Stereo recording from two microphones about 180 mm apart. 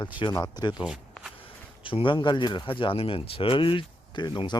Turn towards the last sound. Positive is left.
turn(degrees=25)  # may be behind; listen again after turning